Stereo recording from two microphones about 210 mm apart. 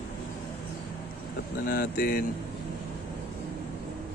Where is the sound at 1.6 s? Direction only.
45° left (ahead or behind).